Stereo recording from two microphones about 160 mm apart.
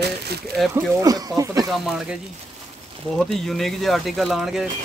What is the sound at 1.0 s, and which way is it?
Speech, 20° right (ahead or behind).